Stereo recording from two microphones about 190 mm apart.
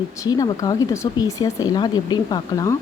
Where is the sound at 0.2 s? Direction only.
20° left (ahead or behind).